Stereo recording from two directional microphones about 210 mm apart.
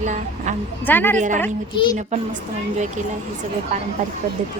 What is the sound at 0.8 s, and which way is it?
Speech, 10° left (ahead or behind).